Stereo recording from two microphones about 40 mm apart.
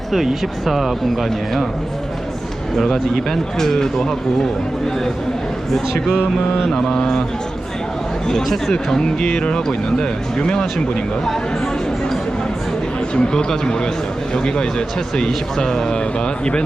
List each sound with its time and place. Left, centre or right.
0.6 s speech: centre
2.7 s speech: centre
6.7 s speech: centre
8.3 s speech: centre
8.7 s speech: centre
13.1 s speech: centre